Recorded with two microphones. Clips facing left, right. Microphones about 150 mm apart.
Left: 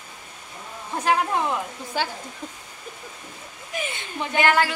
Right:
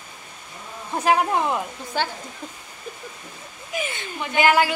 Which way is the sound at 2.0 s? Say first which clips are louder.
Right 1 dB; 5° left (ahead or behind).